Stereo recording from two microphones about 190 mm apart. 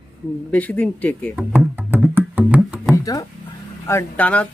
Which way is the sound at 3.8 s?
10° left (ahead or behind).